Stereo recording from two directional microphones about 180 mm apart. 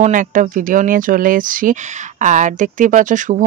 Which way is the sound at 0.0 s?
45° right (ahead or behind).